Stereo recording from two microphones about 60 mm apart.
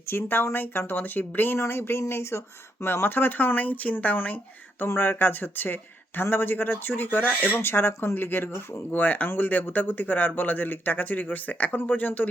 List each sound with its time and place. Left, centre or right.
0.1 s speech: left
1.5 s speech: left
4.9 s speech: left